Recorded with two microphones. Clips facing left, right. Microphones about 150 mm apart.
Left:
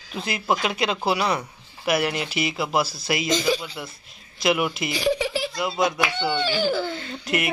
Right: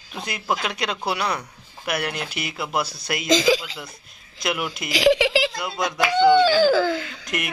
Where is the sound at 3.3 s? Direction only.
90° right.